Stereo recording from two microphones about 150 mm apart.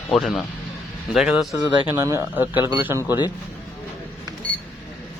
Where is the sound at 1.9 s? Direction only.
15° right (ahead or behind).